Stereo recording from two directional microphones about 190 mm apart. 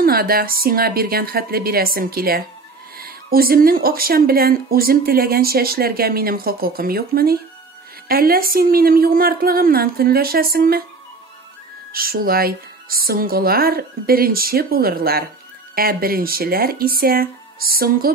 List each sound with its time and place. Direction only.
0.0 s speech: 50° right (ahead or behind)
11.9 s speech: 50° right (ahead or behind)